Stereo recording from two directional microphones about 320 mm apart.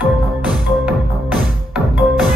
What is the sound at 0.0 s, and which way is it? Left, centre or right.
Music, centre.